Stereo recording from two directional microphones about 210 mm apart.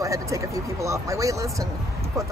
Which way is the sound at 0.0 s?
15° right (ahead or behind).